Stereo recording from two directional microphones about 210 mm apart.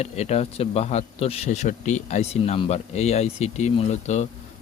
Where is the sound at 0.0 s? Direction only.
30° left (ahead or behind).